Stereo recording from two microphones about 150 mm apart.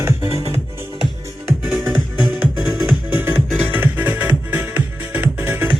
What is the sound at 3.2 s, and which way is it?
Music, 15° right (ahead or behind).